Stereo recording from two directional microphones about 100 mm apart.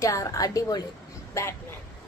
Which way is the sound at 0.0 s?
30° left (ahead or behind).